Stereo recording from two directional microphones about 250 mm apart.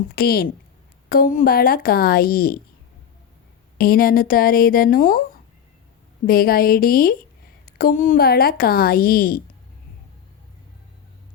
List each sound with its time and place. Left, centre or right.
0.2 s speech: left
3.8 s speech: left